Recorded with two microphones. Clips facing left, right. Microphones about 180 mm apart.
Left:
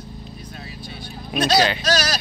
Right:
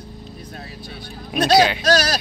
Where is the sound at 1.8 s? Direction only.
55° right (ahead or behind).